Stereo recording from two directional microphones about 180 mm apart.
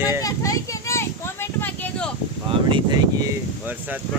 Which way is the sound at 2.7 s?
20° right (ahead or behind).